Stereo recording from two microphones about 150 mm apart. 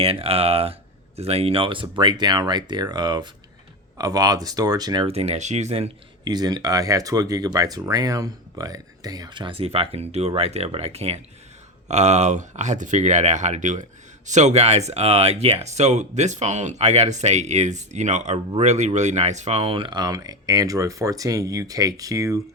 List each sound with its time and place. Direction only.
0.0 s speech: 40° right (ahead or behind)
5.0 s speech: 45° right (ahead or behind)
6.2 s speech: 25° right (ahead or behind)